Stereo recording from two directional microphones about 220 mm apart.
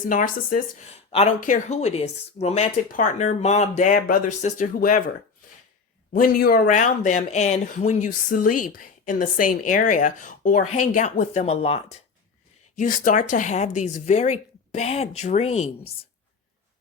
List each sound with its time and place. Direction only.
0.1 s speech: 40° left (ahead or behind)
6.1 s speech: 40° left (ahead or behind)